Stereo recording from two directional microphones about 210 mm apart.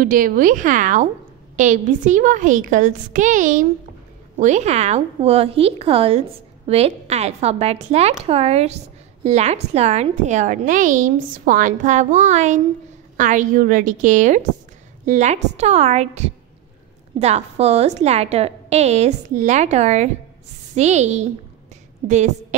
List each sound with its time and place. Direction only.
0.0 s a woman's voice: 40° right (ahead or behind)